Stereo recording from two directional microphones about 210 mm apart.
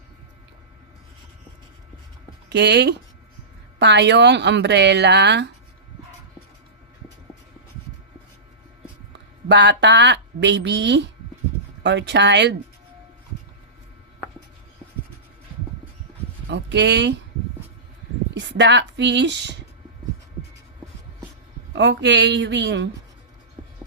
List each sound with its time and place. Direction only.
2.5 s speech: 55° right (ahead or behind)
9.5 s speech: 55° right (ahead or behind)
16.5 s speech: 55° right (ahead or behind)
18.3 s speech: 55° right (ahead or behind)
21.7 s speech: 55° right (ahead or behind)